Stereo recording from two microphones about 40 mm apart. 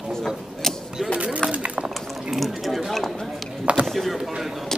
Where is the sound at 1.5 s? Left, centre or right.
Right.